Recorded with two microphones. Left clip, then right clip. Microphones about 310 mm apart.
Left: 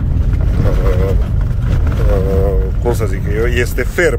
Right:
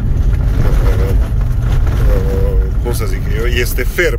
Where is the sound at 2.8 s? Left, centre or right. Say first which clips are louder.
Left 5 dB; centre.